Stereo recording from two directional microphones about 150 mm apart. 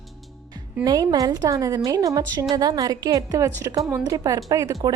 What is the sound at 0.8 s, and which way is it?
Speech, 25° right (ahead or behind).